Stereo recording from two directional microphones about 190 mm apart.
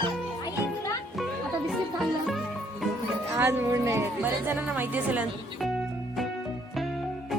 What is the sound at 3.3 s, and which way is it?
Speech, 15° right (ahead or behind).